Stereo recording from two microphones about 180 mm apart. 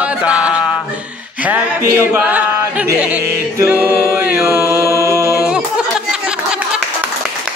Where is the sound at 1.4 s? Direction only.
10° right (ahead or behind).